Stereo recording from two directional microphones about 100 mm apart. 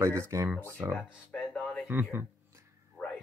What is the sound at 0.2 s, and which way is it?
Speech, 30° right (ahead or behind).